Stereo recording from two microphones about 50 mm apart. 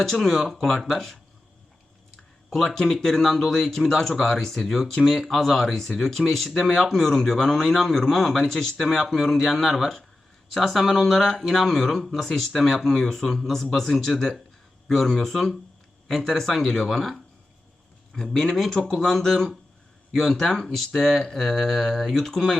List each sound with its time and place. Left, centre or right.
0.0 s speech: centre
2.6 s speech: centre